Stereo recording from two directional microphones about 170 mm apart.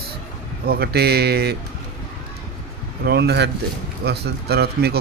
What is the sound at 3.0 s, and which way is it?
Speech, 75° right (ahead or behind).